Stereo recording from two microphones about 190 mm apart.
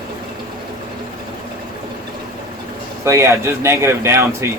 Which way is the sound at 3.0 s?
15° right (ahead or behind).